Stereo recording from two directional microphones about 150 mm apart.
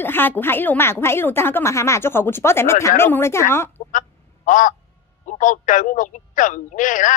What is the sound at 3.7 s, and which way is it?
Duck, 60° left (ahead or behind).